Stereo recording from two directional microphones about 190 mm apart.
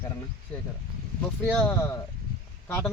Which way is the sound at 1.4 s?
10° left (ahead or behind).